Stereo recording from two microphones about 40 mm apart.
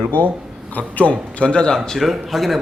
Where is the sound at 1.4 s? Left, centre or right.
Left.